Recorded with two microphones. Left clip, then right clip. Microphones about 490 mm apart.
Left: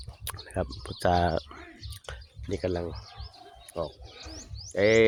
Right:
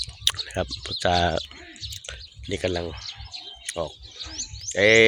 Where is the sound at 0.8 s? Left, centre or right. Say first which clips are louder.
Right 3 dB; left.